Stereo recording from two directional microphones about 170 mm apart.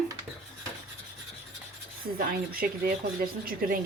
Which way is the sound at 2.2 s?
60° right (ahead or behind).